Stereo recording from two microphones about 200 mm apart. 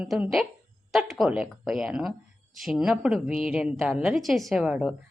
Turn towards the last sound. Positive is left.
turn(degrees=-5)  # may be behind; listen again after turning